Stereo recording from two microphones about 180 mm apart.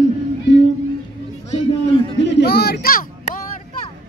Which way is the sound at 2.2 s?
70° left (ahead or behind).